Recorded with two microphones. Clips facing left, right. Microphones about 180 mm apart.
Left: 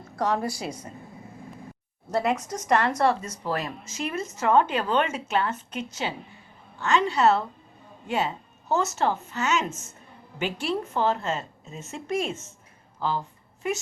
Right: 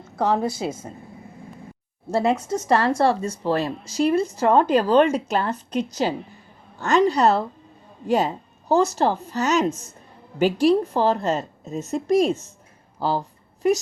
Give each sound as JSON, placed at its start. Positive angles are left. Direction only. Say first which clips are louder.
{"t": 0.3, "sound": "a woman's voice", "louder": "right 5 dB", "side_deg": -20}
{"t": 2.0, "sound": "speech", "louder": "right 4 dB", "side_deg": -30}
{"t": 13.0, "sound": "a sound", "louder": "right 4 dB", "side_deg": -35}